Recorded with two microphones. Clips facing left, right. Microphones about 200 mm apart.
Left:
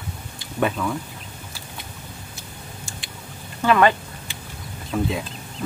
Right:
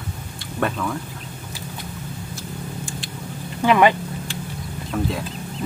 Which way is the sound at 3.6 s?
15° right (ahead or behind).